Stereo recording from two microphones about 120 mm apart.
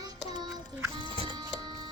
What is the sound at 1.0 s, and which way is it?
Music, 40° right (ahead or behind).